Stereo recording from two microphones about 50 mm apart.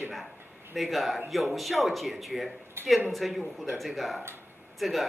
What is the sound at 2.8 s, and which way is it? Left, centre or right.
Speech, right.